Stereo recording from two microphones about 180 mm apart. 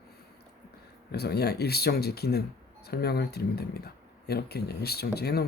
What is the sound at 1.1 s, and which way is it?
Speech, 65° left (ahead or behind).